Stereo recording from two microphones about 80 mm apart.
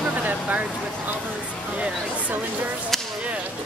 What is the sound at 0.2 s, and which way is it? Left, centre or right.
Speech, centre.